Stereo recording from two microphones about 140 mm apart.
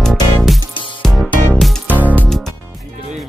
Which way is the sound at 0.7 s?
35° left (ahead or behind).